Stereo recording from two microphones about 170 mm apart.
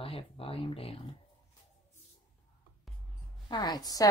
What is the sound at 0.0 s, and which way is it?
Speech, 35° left (ahead or behind).